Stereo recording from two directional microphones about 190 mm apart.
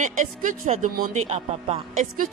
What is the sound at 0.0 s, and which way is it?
A man's voice, 40° right (ahead or behind).